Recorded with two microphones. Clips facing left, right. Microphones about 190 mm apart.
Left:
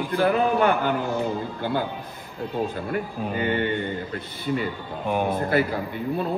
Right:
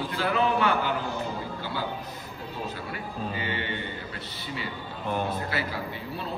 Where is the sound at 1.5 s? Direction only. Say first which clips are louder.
Left 6 dB; 55° left (ahead or behind).